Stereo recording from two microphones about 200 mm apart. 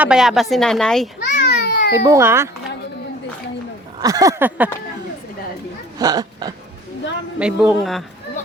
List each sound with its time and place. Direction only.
0.0 s a woman's voice: 5° right (ahead or behind)
1.4 s babbling: 55° left (ahead or behind)
1.9 s a sound: 15° right (ahead or behind)
4.0 s a sound: 15° right (ahead or behind)
6.0 s speech: 20° right (ahead or behind)
7.3 s a woman's voice: 5° right (ahead or behind)